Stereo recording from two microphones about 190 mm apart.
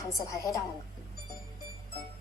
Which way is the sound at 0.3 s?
15° left (ahead or behind).